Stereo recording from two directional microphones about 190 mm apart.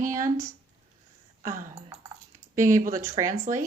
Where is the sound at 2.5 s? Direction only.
15° right (ahead or behind).